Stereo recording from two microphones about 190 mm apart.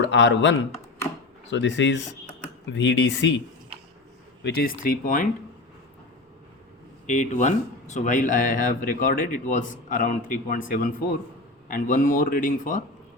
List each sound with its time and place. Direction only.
0.0 s speech: 70° left (ahead or behind)
3.7 s a sound: 30° right (ahead or behind)
4.4 s speech: 50° left (ahead or behind)
7.1 s speech: 40° left (ahead or behind)